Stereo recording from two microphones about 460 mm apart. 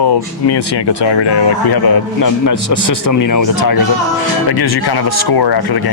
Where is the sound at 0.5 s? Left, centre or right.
Left.